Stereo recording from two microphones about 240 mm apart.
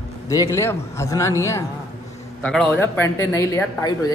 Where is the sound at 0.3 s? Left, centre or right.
Centre.